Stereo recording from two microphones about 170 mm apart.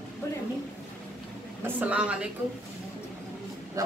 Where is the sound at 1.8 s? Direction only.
5° right (ahead or behind).